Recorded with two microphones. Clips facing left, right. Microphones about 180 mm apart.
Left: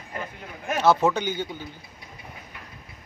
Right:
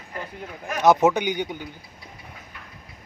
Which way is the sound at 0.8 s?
20° right (ahead or behind).